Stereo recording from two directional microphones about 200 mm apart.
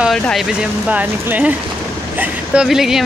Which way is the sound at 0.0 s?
Centre (ahead or behind).